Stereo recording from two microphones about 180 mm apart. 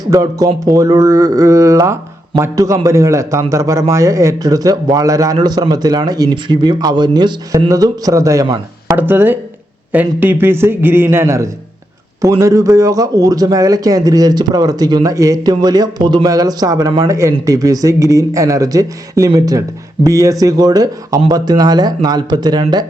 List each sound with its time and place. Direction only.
0.1 s a man's voice: 20° right (ahead or behind)